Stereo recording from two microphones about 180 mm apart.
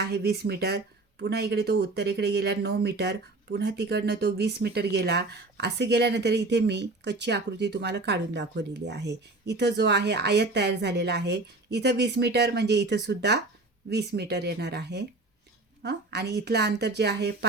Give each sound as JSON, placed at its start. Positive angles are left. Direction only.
{"t": 0.0, "sound": "a woman's voice", "side_deg": -65}